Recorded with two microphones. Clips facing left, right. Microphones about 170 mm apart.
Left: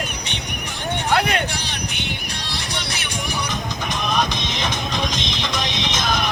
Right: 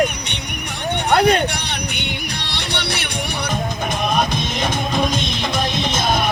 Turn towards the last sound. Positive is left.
turn(degrees=-50)  # may be behind; listen again after turning